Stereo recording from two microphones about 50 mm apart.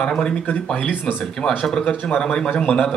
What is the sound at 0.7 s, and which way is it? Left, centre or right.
Speech, left.